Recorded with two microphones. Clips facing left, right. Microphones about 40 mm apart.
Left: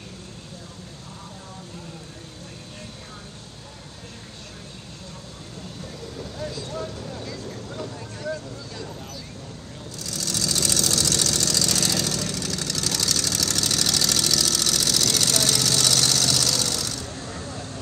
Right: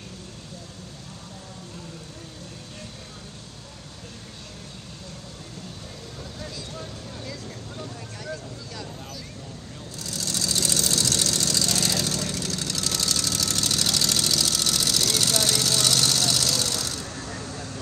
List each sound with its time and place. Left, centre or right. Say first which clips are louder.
6.5 s vehicle: left 5 dB; left
10.0 s vehicle: left 1 dB; right; by 16.8 s centre
16.8 s a sound: left 1 dB; right
17.2 s vehicle: left 1 dB; left